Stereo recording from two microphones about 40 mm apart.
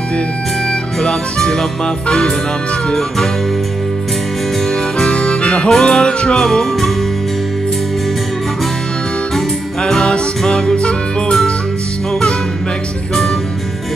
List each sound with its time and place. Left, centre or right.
1.0 s music: centre
4.6 s music: centre
5.2 s music: left
5.7 s music: centre
9.8 s music: centre